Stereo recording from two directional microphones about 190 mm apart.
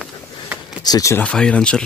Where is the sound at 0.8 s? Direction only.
20° left (ahead or behind).